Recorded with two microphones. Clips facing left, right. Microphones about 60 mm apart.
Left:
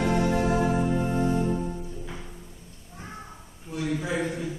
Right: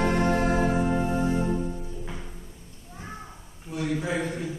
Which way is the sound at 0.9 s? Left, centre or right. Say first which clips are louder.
Even; centre.